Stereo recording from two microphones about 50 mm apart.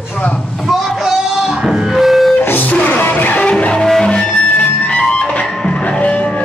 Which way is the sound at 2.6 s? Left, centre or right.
Left.